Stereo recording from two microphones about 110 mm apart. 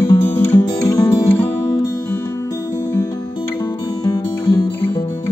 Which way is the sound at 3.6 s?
45° left (ahead or behind).